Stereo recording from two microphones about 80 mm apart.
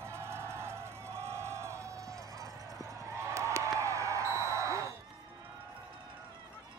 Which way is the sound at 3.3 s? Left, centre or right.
Right.